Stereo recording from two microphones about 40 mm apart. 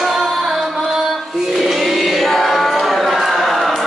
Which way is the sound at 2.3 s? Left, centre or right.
Centre.